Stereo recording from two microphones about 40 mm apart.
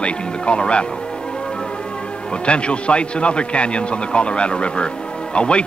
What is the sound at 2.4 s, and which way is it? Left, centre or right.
Speech, left.